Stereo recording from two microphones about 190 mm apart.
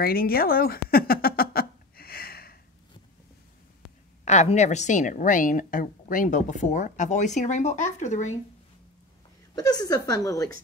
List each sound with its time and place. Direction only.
0.0 s a sound: 50° left (ahead or behind)
4.2 s a woman's voice: 35° left (ahead or behind)
9.6 s a woman's voice: 20° left (ahead or behind)